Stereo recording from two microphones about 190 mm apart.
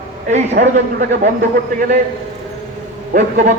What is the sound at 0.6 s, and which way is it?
Speech, 45° right (ahead or behind).